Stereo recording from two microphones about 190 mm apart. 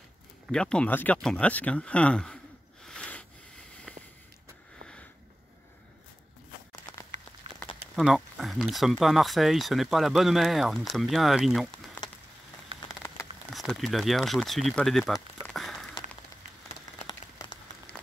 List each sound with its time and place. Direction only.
0.5 s speech: 5° left (ahead or behind)
2.8 s snort: 5° left (ahead or behind)
6.7 s a sound: 20° left (ahead or behind)
7.9 s speech: centre (ahead or behind)
13.5 s speech: centre (ahead or behind)
15.4 s a sound: centre (ahead or behind)
17.9 s applause: 5° left (ahead or behind)